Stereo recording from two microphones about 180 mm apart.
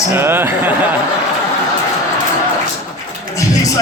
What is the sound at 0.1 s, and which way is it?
Speech, 10° right (ahead or behind).